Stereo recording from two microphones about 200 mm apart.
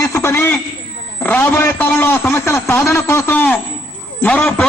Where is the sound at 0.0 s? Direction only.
15° left (ahead or behind).